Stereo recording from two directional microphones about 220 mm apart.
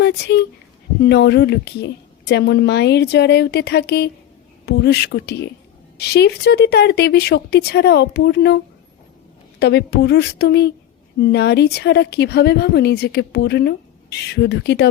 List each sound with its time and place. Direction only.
0.0 s speech: 50° left (ahead or behind)